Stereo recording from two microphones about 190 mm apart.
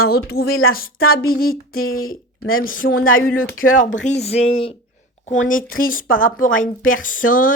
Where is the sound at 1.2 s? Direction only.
50° left (ahead or behind).